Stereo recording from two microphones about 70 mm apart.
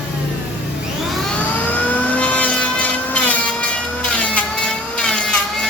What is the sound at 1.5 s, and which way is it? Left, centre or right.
Vehicle, left.